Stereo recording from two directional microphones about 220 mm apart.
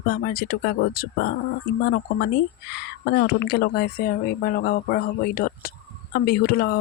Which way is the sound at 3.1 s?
45° left (ahead or behind).